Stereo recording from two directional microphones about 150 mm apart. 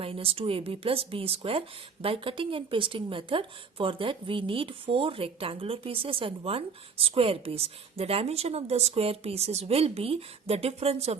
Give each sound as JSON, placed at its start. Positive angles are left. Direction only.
{"t": 0.0, "sound": "speech", "side_deg": -40}